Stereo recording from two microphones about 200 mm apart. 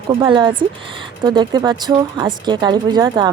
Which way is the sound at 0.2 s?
25° right (ahead or behind).